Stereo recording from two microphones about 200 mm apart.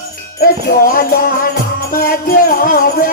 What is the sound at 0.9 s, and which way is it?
Music, 45° left (ahead or behind).